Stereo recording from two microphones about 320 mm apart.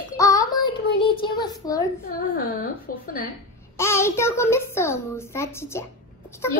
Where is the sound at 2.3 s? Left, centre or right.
Left.